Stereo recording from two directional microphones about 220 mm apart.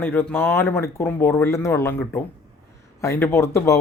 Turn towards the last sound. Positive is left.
turn(degrees=15)  # may be behind; listen again after turning